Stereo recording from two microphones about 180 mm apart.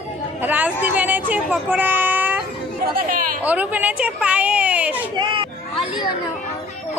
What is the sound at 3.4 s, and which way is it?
A woman's voice, 10° right (ahead or behind).